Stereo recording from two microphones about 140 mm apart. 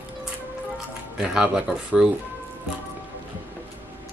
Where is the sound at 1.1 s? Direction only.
5° right (ahead or behind).